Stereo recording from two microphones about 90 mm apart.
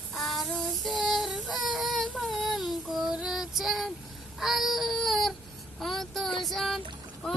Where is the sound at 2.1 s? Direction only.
Centre (ahead or behind).